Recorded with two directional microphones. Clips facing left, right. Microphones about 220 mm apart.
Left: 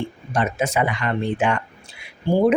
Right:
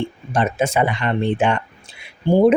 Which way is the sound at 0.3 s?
30° right (ahead or behind).